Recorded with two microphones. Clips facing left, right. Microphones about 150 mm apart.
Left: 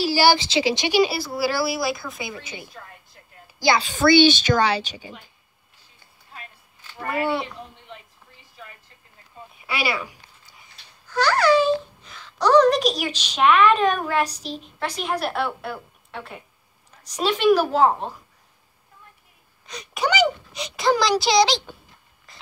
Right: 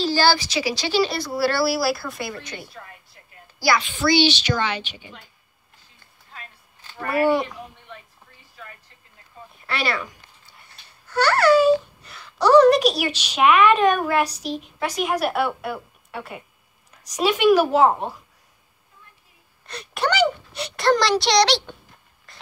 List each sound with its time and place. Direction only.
0.0 s a woman's voice: 10° left (ahead or behind)
0.4 s speech: 25° left (ahead or behind); by 2.7 s 5° left (ahead or behind)
3.5 s a woman's voice: 20° left (ahead or behind)
3.8 s a woman's voice: 45° left (ahead or behind)
7.2 s a woman's voice: 10° right (ahead or behind)
9.7 s speech: 5° left (ahead or behind)
10.6 s a child's voice: 5° right (ahead or behind)
19.7 s speech: centre (ahead or behind)
22.3 s a sound: centre (ahead or behind)